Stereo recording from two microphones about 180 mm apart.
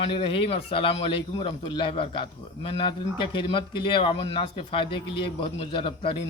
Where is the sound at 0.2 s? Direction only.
30° left (ahead or behind).